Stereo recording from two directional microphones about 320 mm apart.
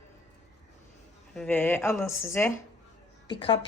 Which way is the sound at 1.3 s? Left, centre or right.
Centre.